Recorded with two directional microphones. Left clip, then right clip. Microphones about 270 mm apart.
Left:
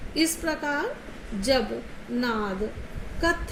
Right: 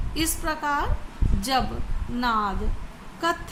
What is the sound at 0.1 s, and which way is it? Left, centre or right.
Speech, centre.